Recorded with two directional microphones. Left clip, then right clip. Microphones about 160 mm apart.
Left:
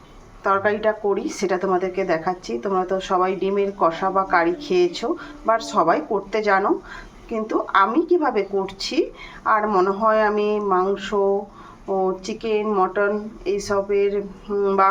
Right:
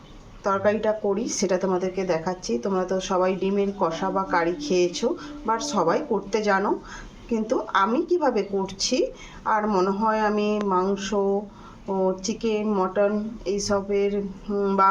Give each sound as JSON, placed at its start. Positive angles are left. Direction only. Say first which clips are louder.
{"t": 0.4, "sound": "a woman's voice", "louder": "left 3 dB", "side_deg": 15}
{"t": 12.2, "sound": "a woman's voice", "louder": "left 3 dB", "side_deg": 15}